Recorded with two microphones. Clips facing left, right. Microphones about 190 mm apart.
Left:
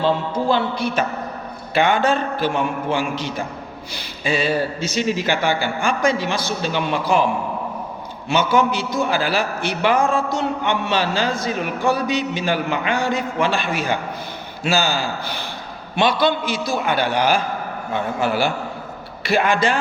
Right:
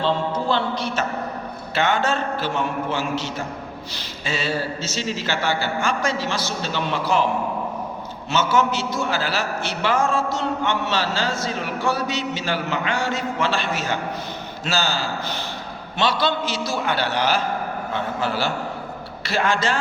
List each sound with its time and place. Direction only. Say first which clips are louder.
0.0 s a man's voice: left 2 dB; 10° left (ahead or behind)
8.3 s a man's voice: left 3 dB; 15° left (ahead or behind)